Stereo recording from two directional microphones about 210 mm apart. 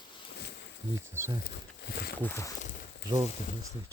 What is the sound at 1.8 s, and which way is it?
Speech, 50° left (ahead or behind).